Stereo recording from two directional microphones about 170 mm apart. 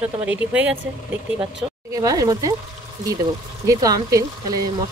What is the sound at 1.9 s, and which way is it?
Speech, 20° right (ahead or behind).